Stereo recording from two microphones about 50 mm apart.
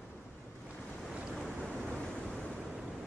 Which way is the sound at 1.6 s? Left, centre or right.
Centre.